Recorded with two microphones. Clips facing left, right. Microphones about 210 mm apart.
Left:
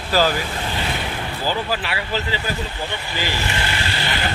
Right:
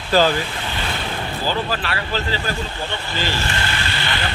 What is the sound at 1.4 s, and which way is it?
Speech, 10° left (ahead or behind).